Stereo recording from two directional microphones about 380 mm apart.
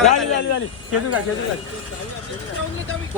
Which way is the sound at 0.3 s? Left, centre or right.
Left.